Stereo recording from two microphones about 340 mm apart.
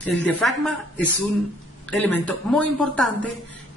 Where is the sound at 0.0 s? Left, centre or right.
Centre.